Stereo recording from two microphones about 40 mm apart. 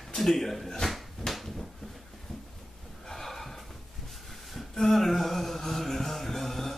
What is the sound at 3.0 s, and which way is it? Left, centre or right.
Snort, centre.